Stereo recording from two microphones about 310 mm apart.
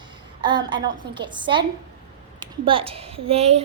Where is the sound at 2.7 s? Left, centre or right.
Centre.